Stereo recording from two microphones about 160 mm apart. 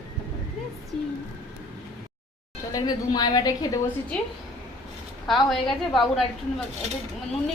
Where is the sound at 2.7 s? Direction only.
25° left (ahead or behind).